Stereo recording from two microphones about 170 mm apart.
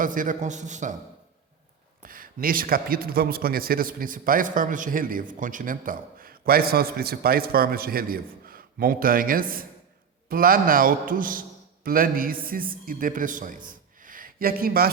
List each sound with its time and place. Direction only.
0.0 s speech: 50° right (ahead or behind)
2.0 s a man's voice: 55° right (ahead or behind)
13.7 s a sound: 55° right (ahead or behind)